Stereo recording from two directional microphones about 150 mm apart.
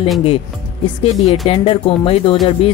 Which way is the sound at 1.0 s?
40° left (ahead or behind).